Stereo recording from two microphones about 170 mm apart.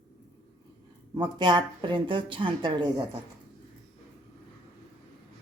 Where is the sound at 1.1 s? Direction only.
25° right (ahead or behind).